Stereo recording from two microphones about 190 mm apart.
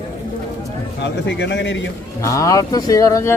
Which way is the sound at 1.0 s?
70° left (ahead or behind).